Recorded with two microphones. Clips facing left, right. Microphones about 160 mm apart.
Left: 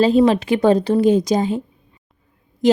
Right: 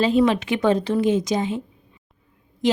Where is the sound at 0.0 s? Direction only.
35° left (ahead or behind).